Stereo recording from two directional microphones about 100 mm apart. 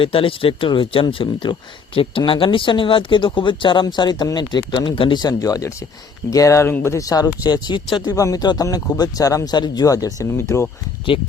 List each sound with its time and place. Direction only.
0.0 s speech: 65° left (ahead or behind)
5.3 s speech: 35° left (ahead or behind)
6.7 s speech: 20° left (ahead or behind)
6.9 s speech: 35° left (ahead or behind)
11.1 s speech: 60° left (ahead or behind)